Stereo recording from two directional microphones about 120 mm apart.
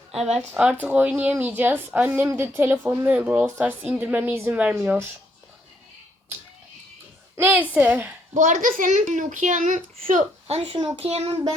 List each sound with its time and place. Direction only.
0.3 s a woman's voice: 10° right (ahead or behind)
7.3 s a woman's voice: 15° right (ahead or behind)
8.3 s a child's voice: 90° right
10.4 s speech: 55° right (ahead or behind)
10.9 s a child's voice: 60° right (ahead or behind)